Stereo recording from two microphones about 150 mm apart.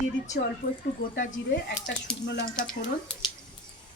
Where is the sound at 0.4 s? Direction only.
90° left.